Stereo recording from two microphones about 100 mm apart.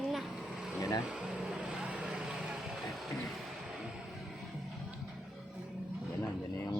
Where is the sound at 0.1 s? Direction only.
5° right (ahead or behind).